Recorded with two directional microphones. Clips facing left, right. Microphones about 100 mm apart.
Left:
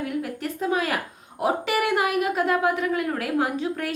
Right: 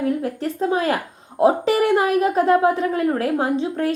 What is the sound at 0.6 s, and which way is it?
A woman's voice, 30° right (ahead or behind).